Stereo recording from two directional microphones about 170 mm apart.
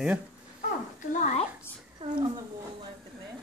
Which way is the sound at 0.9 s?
45° left (ahead or behind).